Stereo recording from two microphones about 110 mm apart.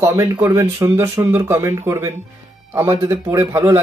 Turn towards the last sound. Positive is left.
turn(degrees=-25)  # may be behind; listen again after turning